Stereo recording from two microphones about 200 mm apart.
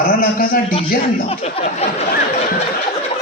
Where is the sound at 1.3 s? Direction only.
30° left (ahead or behind).